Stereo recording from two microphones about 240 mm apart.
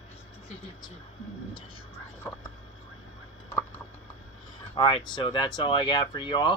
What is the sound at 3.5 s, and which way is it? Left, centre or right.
Rodents, centre.